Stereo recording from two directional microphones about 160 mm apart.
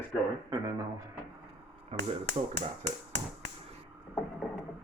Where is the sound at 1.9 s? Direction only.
40° right (ahead or behind).